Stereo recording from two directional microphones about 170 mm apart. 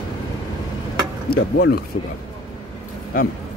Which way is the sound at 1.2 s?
65° left (ahead or behind).